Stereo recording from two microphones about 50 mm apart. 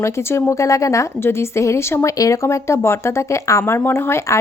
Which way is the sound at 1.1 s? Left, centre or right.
Left.